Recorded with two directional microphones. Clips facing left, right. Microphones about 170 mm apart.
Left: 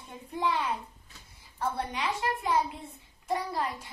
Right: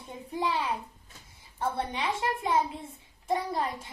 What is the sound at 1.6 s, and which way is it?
A child's voice, 25° right (ahead or behind).